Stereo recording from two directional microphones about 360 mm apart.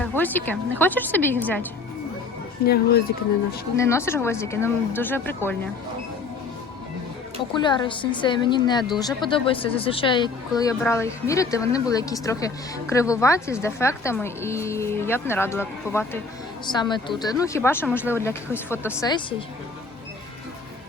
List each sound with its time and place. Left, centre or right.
0.0 s music: centre
0.8 s a woman's voice: centre
2.6 s speech: left
3.8 s speech: centre
7.5 s speech: centre